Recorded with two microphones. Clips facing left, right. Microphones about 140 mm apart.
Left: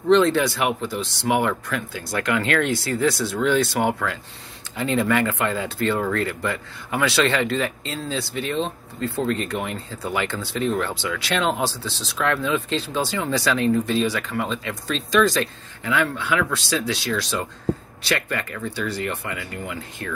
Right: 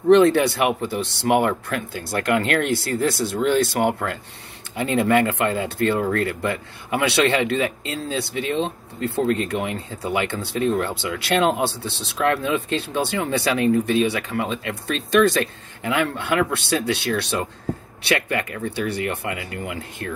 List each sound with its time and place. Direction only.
0.1 s speech: 60° right (ahead or behind)